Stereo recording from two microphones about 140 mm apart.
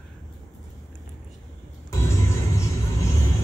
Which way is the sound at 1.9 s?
20° left (ahead or behind).